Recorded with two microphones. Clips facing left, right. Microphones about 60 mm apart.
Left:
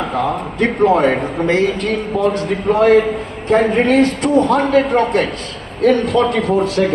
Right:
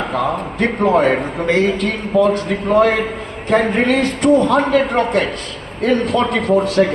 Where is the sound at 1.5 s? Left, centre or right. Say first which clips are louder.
Even; left.